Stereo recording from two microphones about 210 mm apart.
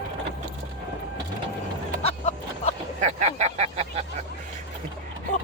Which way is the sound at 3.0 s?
35° right (ahead or behind).